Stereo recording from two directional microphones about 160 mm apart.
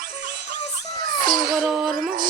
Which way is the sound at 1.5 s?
5° right (ahead or behind).